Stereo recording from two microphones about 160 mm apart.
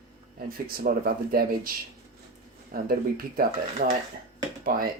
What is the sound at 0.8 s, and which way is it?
Speech, 70° right (ahead or behind).